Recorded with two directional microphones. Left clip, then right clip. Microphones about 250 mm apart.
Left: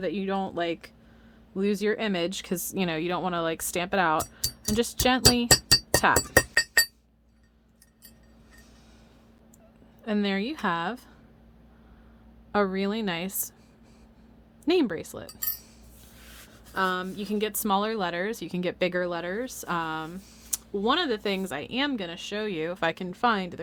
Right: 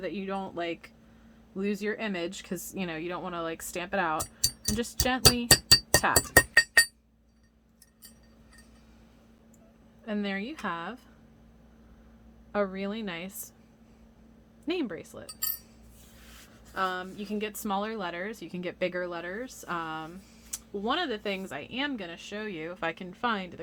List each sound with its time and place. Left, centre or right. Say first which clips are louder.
0.0 s speech: left 5 dB; left
5.5 s music: even; centre
10.1 s a woman's voice: left 5 dB; left
12.5 s a woman's voice: left 5 dB; left
14.7 s a woman's voice: left 8 dB; left
16.7 s a woman's voice: left 4 dB; left